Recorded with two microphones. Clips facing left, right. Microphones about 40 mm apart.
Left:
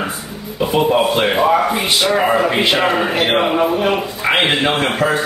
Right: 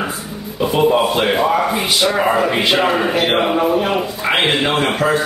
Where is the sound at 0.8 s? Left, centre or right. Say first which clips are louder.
Right 2 dB; centre.